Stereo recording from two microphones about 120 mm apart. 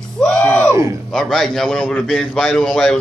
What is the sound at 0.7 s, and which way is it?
Speech, 25° right (ahead or behind).